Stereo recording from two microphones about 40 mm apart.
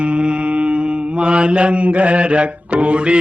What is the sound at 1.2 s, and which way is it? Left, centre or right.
Mantra, right.